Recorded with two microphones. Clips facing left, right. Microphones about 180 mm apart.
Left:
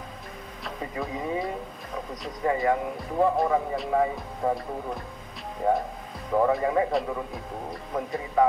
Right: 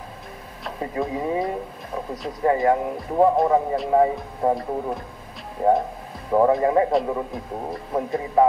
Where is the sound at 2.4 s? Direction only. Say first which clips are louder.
Right 5 dB; 35° right (ahead or behind).